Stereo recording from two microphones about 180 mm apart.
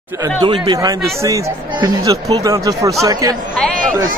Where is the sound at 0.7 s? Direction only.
15° right (ahead or behind).